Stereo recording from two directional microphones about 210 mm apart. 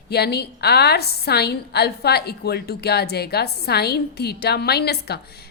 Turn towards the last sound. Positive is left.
turn(degrees=50)  # may be behind; listen again after turning